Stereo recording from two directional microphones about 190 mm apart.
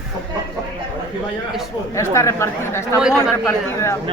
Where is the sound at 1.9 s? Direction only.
15° left (ahead or behind).